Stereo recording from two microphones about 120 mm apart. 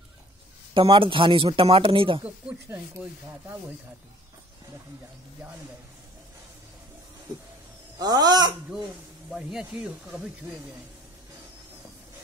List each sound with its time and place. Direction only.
0.7 s speech: 45° right (ahead or behind)
8.0 s speech: 35° right (ahead or behind)
9.3 s speech: 5° right (ahead or behind)